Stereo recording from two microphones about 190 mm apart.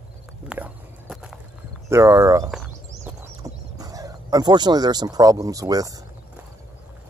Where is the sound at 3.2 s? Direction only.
20° right (ahead or behind).